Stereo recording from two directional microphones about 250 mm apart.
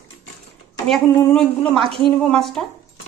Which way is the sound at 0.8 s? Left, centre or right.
Centre.